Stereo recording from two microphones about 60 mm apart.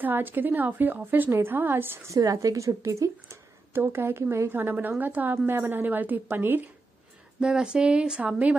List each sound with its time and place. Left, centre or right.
0.0 s a woman's voice: right
2.3 s speech: right
3.7 s a woman's voice: right
7.3 s a woman's voice: centre